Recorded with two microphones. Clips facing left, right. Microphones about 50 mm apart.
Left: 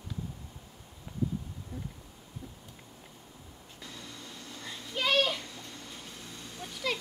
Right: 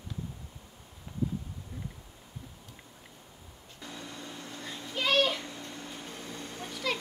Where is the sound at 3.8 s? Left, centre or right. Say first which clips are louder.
Right 4 dB; right.